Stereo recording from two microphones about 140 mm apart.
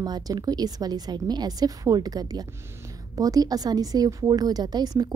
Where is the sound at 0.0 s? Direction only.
30° right (ahead or behind).